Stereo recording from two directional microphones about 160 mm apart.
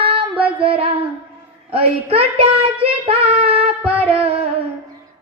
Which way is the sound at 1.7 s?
35° right (ahead or behind).